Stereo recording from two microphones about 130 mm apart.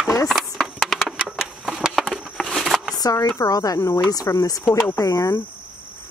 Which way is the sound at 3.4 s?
30° left (ahead or behind).